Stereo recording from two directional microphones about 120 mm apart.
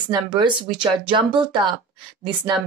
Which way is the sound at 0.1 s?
40° right (ahead or behind).